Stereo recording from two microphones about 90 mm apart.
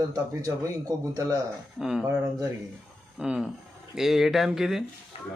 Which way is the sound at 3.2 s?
5° right (ahead or behind).